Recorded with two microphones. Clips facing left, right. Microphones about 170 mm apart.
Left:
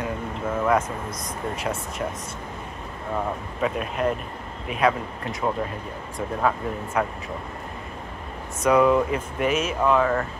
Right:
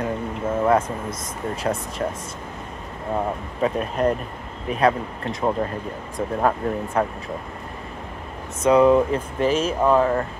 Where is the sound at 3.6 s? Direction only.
35° right (ahead or behind).